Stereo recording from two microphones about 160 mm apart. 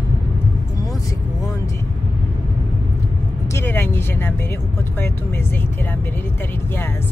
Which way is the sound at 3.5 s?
15° left (ahead or behind).